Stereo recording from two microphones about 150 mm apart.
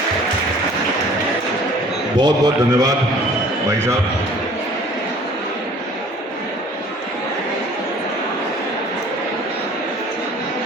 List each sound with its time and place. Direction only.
2.1 s a man's voice: 30° right (ahead or behind)